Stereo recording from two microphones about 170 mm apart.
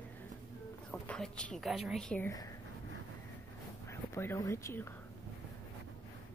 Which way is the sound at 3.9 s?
15° left (ahead or behind).